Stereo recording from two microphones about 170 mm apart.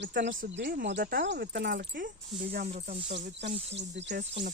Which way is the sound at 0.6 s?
75° right (ahead or behind).